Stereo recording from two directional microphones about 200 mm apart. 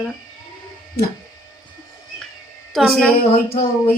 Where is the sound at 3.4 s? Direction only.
45° left (ahead or behind).